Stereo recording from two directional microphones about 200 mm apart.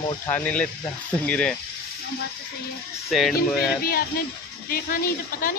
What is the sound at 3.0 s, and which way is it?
Speech, centre (ahead or behind).